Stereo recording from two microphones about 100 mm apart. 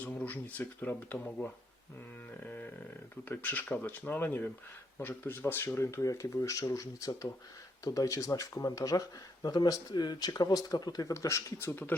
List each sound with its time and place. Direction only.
0.0 s speech: 15° left (ahead or behind)
3.2 s speech: 20° left (ahead or behind)